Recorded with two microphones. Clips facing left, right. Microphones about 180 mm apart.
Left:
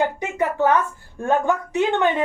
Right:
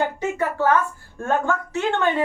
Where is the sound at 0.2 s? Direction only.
15° left (ahead or behind).